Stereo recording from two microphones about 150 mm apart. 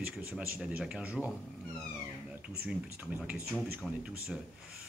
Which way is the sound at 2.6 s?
10° right (ahead or behind).